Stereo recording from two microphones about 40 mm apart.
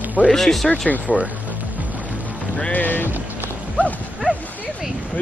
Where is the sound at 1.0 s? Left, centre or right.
Right.